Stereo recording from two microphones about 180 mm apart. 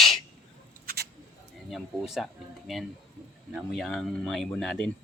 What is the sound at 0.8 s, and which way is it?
Mouse, 60° right (ahead or behind).